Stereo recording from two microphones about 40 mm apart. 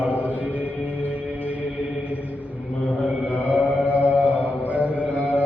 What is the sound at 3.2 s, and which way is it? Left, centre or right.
Mantra, right.